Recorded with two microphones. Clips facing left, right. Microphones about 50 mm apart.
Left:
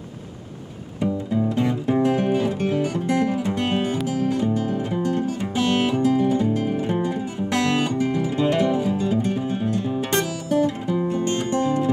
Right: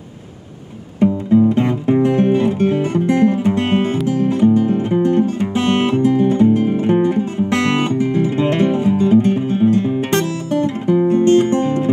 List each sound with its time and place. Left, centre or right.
0.9 s music: right